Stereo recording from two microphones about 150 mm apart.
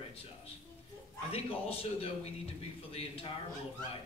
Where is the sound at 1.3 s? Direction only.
40° left (ahead or behind).